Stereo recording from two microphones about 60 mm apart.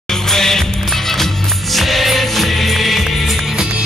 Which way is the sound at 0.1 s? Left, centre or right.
Centre.